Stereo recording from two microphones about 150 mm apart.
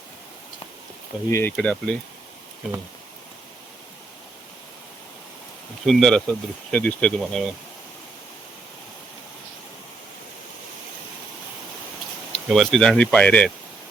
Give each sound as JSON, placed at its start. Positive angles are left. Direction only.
{"t": 1.3, "sound": "speech", "side_deg": 15}
{"t": 5.8, "sound": "speech", "side_deg": 5}
{"t": 12.3, "sound": "speech", "side_deg": 0}